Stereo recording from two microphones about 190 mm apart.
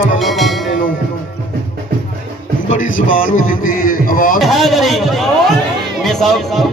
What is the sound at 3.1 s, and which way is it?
Music, 45° left (ahead or behind).